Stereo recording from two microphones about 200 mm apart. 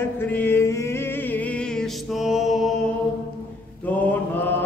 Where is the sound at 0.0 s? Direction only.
10° left (ahead or behind).